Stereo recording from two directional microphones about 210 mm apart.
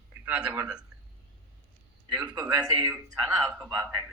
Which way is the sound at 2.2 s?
10° right (ahead or behind).